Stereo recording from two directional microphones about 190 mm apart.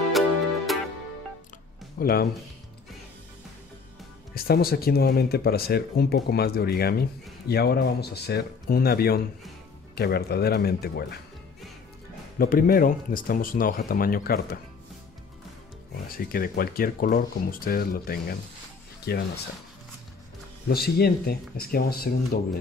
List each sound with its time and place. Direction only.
0.7 s music: centre (ahead or behind)
2.0 s speech: 50° left (ahead or behind)
4.3 s speech: 55° left (ahead or behind)
12.4 s speech: 50° left (ahead or behind)
16.1 s speech: 50° left (ahead or behind)
20.6 s speech: 55° left (ahead or behind)